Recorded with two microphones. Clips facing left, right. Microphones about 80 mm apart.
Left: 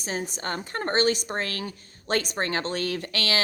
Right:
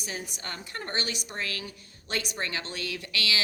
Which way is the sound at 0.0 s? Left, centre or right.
Left.